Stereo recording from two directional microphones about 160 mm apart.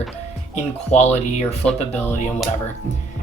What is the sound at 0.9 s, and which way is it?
Speech, 45° left (ahead or behind).